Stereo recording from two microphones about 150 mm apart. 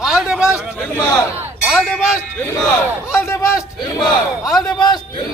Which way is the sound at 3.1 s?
20° left (ahead or behind).